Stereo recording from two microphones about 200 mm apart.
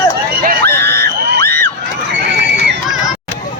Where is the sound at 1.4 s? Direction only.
10° left (ahead or behind).